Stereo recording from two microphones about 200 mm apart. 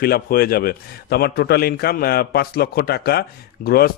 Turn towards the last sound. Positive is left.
turn(degrees=50)  # may be behind; listen again after turning